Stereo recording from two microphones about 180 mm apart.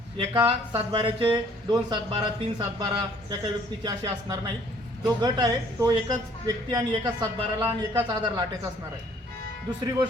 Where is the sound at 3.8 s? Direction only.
20° right (ahead or behind).